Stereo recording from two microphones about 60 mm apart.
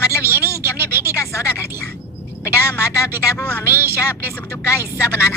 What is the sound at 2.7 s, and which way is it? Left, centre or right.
Speech, left.